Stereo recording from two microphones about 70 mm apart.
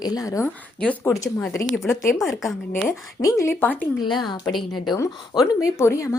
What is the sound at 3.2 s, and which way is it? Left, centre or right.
Speech, left.